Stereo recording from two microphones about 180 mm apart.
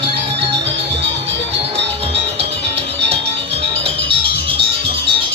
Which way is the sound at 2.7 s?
35° right (ahead or behind).